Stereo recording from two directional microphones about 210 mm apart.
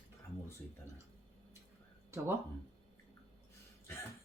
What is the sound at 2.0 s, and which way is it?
Speech, 10° right (ahead or behind).